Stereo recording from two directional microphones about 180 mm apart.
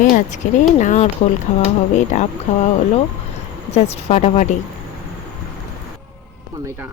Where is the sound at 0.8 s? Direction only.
45° left (ahead or behind).